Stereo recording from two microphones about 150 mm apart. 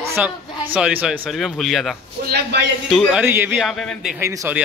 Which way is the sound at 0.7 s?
5° right (ahead or behind).